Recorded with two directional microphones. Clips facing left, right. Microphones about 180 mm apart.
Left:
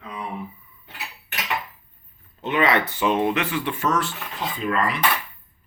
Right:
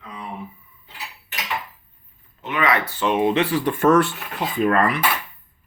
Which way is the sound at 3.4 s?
40° right (ahead or behind).